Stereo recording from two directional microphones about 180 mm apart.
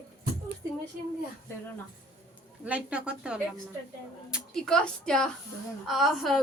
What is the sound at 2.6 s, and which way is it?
A woman's voice, 5° right (ahead or behind).